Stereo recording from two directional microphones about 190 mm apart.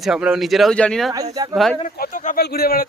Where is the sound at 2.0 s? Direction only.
45° left (ahead or behind).